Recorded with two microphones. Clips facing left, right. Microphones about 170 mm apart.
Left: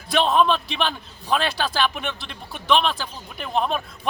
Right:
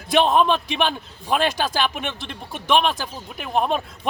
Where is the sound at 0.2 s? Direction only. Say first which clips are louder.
Right 1 dB; 15° right (ahead or behind).